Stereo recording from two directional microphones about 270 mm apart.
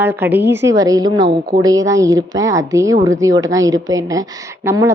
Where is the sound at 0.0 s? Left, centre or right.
Centre.